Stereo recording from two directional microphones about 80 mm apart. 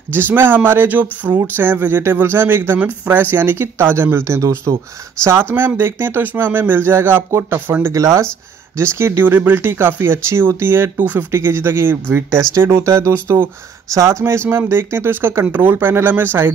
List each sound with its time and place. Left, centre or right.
0.1 s speech: right
7.9 s speech: right